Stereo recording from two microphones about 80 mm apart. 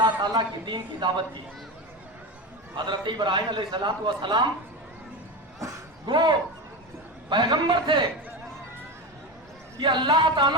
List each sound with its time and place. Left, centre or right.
0.2 s a man's voice: right
2.7 s a man's voice: right
5.5 s a sound: right
6.1 s a man's voice: right
9.7 s a man's voice: right